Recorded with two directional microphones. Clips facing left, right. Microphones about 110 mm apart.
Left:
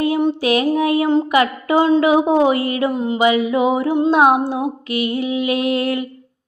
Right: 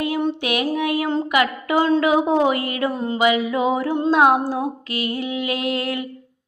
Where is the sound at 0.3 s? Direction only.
30° left (ahead or behind).